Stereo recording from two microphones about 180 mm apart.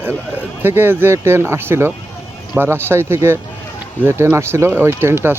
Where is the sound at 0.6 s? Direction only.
10° right (ahead or behind).